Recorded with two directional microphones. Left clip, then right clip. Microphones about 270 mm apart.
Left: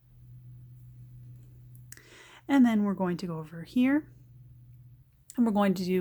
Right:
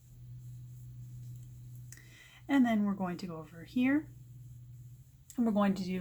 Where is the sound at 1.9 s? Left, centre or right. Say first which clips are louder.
Left 6 dB; left.